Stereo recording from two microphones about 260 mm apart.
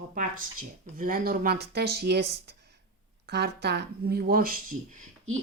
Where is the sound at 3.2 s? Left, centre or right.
Right.